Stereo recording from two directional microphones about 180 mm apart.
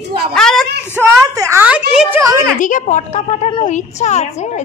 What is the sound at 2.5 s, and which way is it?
A woman's voice, 45° left (ahead or behind).